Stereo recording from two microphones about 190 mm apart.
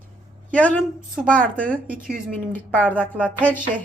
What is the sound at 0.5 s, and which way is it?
Speech, 10° left (ahead or behind).